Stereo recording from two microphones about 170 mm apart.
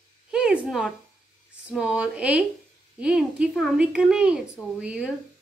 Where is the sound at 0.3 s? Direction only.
5° right (ahead or behind).